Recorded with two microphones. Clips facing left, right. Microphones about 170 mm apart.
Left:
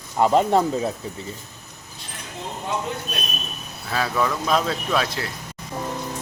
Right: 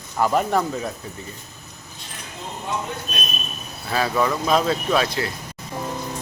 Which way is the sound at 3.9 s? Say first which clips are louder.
Right 2 dB; 5° right (ahead or behind).